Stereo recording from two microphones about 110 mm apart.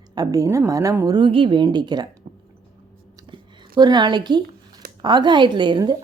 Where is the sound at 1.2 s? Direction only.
50° right (ahead or behind).